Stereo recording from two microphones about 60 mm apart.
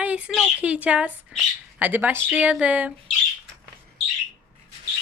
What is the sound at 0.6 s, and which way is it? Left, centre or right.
Speech, right.